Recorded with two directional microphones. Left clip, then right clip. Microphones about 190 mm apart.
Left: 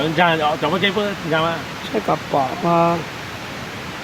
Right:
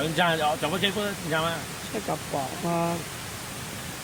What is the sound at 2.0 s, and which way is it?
Speech, 20° left (ahead or behind).